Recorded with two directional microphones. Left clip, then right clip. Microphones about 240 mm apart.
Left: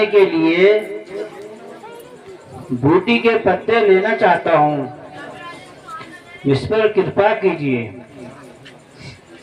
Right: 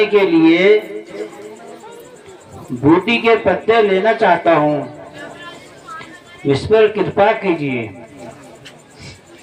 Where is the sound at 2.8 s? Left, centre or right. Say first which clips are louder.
Right 2 dB; right.